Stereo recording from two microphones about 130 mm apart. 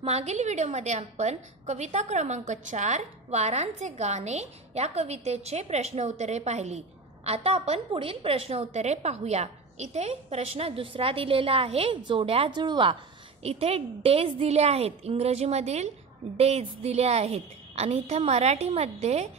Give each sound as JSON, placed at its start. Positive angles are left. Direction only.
{"t": 0.0, "sound": "a woman's voice", "side_deg": -55}
{"t": 13.4, "sound": "a woman's voice", "side_deg": -50}